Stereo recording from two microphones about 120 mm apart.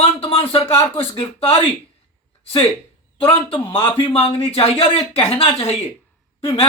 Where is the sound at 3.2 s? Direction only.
50° left (ahead or behind).